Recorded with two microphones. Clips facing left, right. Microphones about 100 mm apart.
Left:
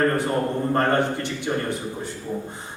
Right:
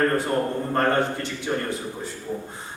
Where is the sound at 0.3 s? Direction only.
10° left (ahead or behind).